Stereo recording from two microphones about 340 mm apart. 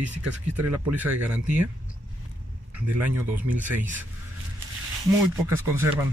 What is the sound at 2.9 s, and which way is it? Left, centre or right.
Speech, centre.